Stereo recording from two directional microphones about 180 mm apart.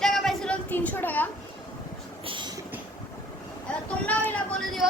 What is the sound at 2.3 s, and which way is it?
Train, 25° right (ahead or behind).